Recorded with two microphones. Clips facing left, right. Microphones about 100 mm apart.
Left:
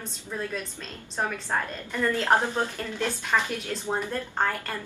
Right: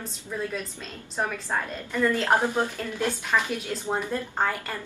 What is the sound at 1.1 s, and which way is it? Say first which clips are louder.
A woman's voice: even; 10° right (ahead or behind).